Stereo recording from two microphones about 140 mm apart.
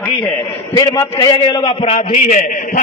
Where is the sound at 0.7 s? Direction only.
25° left (ahead or behind).